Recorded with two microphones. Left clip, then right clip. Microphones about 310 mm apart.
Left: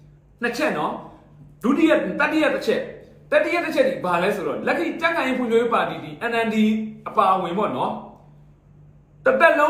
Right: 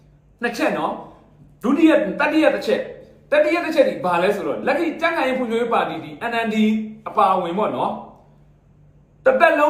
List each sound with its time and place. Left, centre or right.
0.3 s speech: centre
9.2 s speech: centre